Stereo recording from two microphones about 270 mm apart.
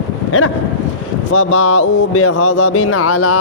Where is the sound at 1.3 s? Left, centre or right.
Left.